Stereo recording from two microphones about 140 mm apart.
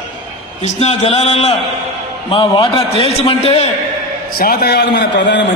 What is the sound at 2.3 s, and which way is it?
A man's voice, 35° left (ahead or behind).